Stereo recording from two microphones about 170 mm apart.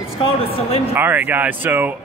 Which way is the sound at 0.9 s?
10° right (ahead or behind).